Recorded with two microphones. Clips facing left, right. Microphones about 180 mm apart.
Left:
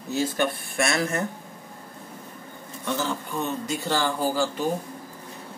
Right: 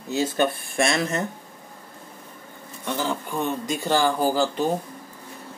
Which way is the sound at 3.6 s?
15° right (ahead or behind).